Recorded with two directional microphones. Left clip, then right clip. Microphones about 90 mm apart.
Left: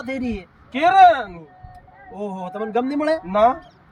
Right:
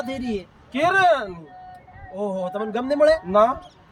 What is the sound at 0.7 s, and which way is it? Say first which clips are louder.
Speech: left 5 dB; 5° right (ahead or behind).